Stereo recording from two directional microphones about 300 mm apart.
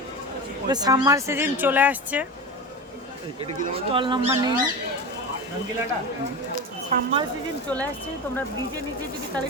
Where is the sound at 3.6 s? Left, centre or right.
Centre.